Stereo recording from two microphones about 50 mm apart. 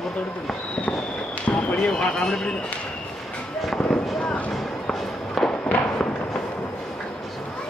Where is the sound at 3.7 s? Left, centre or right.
Left.